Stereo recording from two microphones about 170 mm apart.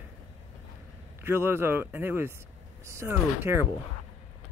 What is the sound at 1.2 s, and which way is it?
Speech, 15° right (ahead or behind).